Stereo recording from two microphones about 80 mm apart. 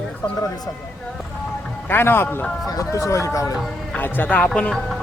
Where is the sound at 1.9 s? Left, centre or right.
Left.